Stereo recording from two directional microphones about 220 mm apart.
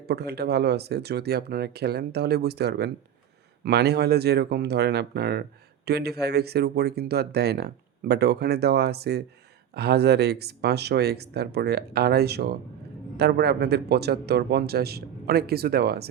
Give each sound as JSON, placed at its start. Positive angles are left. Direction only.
{"t": 0.0, "sound": "speech", "side_deg": -45}